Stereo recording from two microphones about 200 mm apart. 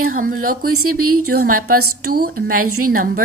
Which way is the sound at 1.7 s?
90° right.